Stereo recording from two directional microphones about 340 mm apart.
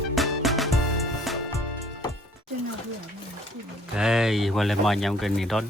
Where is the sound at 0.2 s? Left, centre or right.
Centre.